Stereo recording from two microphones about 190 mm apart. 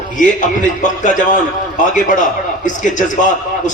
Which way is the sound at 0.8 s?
40° left (ahead or behind).